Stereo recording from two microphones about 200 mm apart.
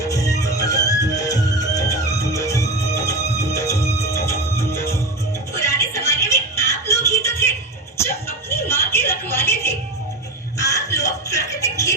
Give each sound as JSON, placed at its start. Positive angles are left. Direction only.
{"t": 0.0, "sound": "music", "side_deg": 15}